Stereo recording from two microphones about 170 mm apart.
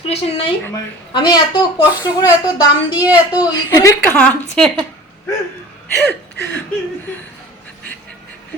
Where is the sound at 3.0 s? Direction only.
10° right (ahead or behind).